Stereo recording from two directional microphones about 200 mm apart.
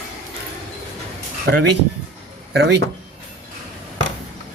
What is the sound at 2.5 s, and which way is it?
Speech, 60° right (ahead or behind).